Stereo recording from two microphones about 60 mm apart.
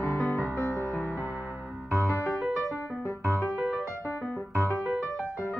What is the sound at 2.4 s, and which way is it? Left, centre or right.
Music, centre.